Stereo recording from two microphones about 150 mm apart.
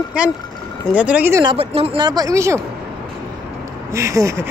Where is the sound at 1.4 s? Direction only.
35° right (ahead or behind); by 2.6 s 20° right (ahead or behind).